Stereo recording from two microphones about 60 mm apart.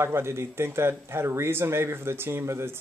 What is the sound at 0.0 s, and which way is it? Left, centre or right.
Speech, right.